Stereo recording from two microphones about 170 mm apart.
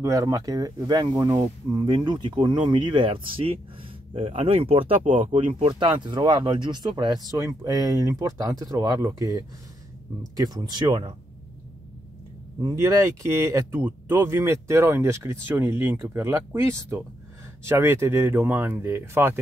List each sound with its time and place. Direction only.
0.0 s speech: 20° right (ahead or behind)
12.6 s speech: 20° right (ahead or behind)